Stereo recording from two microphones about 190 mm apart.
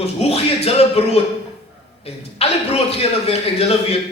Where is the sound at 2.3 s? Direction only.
30° left (ahead or behind).